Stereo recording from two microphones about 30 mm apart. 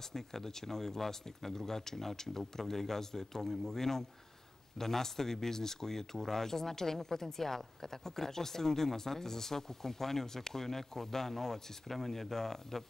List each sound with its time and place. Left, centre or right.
0.1 s speech: centre